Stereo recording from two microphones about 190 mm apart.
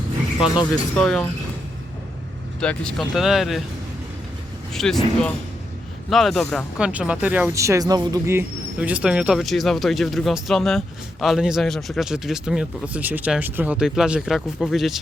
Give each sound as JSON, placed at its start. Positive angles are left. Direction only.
{"t": 0.3, "sound": "speech", "side_deg": 25}
{"t": 0.9, "sound": "speech", "side_deg": 0}
{"t": 2.6, "sound": "speech", "side_deg": 5}
{"t": 4.7, "sound": "speech", "side_deg": 0}